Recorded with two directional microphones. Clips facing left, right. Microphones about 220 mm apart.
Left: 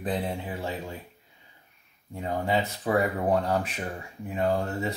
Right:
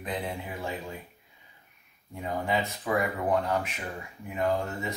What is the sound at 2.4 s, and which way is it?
Speech, 30° left (ahead or behind).